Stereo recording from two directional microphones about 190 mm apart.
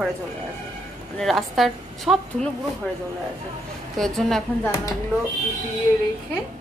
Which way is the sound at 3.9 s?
Centre (ahead or behind).